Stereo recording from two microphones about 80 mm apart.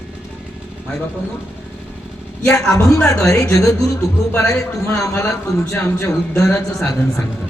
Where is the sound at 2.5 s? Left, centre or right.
Left.